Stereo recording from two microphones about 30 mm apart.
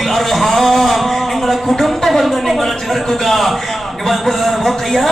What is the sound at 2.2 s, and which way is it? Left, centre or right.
Speech, centre.